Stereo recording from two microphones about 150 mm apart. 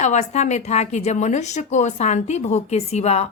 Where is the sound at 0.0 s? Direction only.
50° left (ahead or behind).